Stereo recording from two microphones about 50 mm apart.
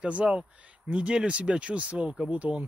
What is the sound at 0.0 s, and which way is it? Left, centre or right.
Speech, right.